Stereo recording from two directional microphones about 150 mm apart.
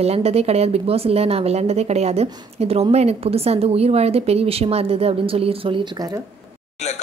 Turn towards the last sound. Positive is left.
turn(degrees=-40)  # may be behind; listen again after turning